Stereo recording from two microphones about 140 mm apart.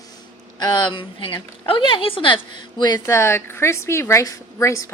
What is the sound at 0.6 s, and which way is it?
A woman's voice, 30° left (ahead or behind).